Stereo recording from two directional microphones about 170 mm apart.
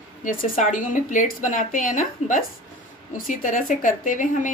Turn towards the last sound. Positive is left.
turn(degrees=50)  # may be behind; listen again after turning